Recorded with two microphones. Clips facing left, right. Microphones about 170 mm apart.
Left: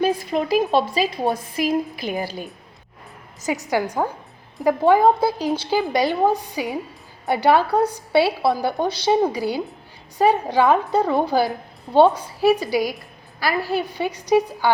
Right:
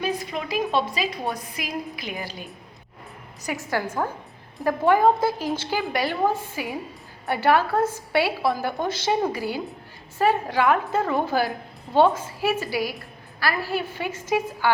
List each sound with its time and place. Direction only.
0.0 s a woman's voice: 35° left (ahead or behind)
3.4 s a woman's voice: 20° left (ahead or behind)